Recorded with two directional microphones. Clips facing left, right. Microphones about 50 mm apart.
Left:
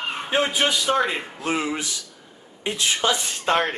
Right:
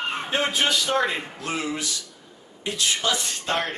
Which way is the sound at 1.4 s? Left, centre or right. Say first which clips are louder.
Left 6 dB; left.